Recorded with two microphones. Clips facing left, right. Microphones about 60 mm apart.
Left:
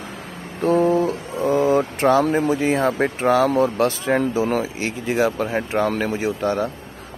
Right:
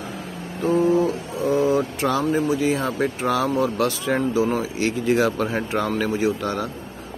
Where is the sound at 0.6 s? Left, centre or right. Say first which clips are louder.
Left 1 dB; left.